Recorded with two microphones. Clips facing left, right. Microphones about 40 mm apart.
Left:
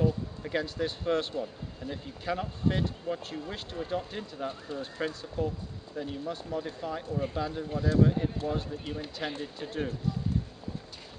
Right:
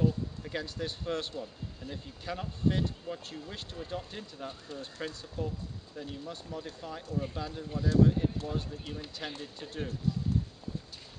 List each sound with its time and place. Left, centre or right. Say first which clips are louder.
0.0 s speech: left 1 dB; centre